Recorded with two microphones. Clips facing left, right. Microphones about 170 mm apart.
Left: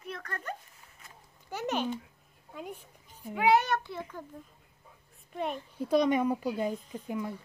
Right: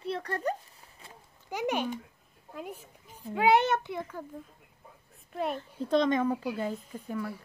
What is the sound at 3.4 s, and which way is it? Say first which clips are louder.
Speech: right 1 dB; 25° right (ahead or behind).